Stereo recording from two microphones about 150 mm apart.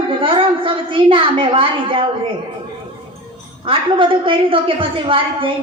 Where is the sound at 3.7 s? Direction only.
35° right (ahead or behind).